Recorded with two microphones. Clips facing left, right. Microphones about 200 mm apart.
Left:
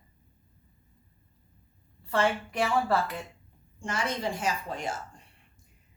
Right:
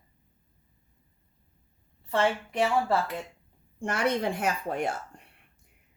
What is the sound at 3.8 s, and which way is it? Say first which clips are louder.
A woman's voice: right 5 dB; 60° right (ahead or behind).